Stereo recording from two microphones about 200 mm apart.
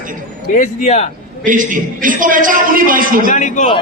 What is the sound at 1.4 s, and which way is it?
A man's voice, 40° right (ahead or behind).